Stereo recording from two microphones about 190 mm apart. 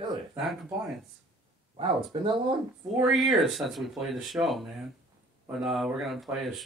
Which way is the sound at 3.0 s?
Centre (ahead or behind).